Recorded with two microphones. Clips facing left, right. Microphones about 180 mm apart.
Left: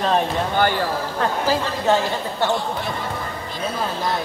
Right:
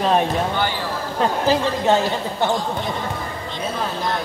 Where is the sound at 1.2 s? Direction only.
20° right (ahead or behind).